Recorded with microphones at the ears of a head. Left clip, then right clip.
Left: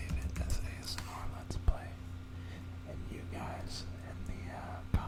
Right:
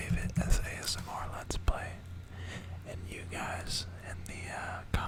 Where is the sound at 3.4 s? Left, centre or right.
Right.